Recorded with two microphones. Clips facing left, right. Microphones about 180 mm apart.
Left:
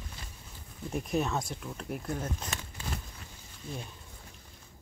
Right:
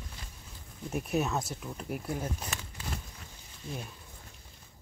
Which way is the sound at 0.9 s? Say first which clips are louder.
Even; 5° right (ahead or behind).